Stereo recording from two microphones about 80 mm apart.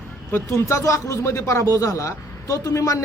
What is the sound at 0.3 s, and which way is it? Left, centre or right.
A man's voice, left.